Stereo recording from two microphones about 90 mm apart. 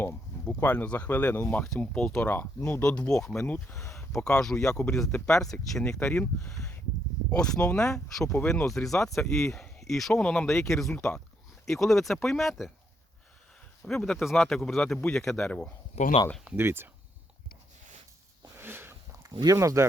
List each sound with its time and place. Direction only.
0.1 s speech: 15° left (ahead or behind)
2.2 s speech: 20° left (ahead or behind); by 12.7 s centre (ahead or behind)
13.8 s speech: 5° left (ahead or behind)
15.4 s speech: 15° left (ahead or behind)
16.6 s speech: 25° right (ahead or behind)
18.6 s a sound: 25° right (ahead or behind)
19.3 s speech: 50° right (ahead or behind)
19.5 s speech: 30° right (ahead or behind)